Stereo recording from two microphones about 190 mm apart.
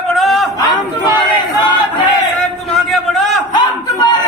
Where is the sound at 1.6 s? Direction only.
25° left (ahead or behind).